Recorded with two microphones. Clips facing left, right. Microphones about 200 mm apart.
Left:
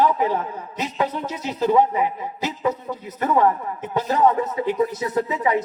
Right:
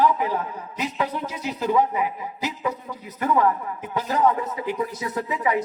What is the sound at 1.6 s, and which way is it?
Speech, 35° left (ahead or behind).